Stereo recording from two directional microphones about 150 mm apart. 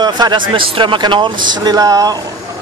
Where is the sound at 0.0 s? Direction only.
30° right (ahead or behind).